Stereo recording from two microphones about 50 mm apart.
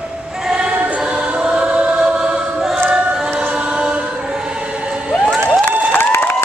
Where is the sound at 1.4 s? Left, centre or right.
Centre.